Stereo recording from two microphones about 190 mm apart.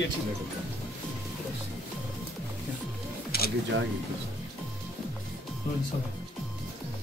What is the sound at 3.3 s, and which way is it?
Camera, 55° left (ahead or behind).